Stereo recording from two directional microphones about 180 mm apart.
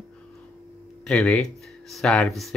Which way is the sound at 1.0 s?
5° left (ahead or behind).